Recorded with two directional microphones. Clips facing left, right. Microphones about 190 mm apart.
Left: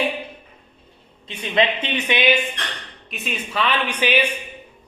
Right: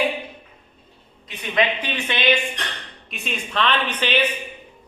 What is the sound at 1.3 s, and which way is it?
Speech, 25° left (ahead or behind).